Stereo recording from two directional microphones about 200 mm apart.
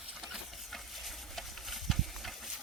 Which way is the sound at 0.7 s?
Centre (ahead or behind).